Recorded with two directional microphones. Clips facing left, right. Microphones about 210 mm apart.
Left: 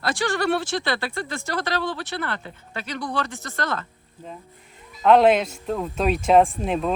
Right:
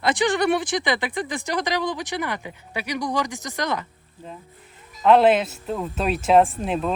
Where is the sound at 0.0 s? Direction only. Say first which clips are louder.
Right 3 dB; 20° right (ahead or behind).